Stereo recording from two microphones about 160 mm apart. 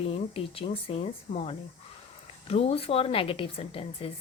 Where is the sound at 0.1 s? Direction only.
35° left (ahead or behind).